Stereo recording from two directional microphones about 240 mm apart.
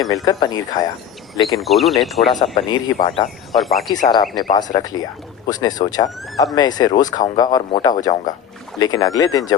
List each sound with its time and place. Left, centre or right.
0.0 s speech: centre
1.6 s speech: centre
2.6 s speech: centre
3.2 s speech: centre
4.1 s speech: centre